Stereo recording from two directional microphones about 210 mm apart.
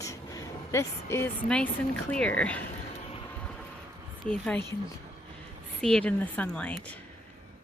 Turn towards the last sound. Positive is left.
turn(degrees=5)  # may be behind; listen again after turning